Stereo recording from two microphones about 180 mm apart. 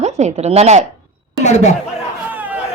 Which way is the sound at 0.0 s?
40° right (ahead or behind).